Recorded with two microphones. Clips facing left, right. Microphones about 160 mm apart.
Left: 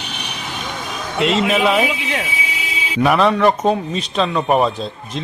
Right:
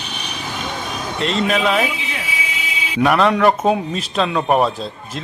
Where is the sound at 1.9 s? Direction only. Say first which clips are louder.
Left 5 dB; 70° left (ahead or behind).